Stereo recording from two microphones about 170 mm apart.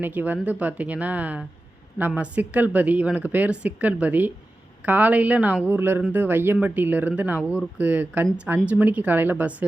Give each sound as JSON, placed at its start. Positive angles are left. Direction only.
{"t": 0.0, "sound": "speech", "side_deg": -10}